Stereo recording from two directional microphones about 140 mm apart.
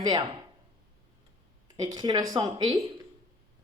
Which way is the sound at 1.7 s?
30° right (ahead or behind).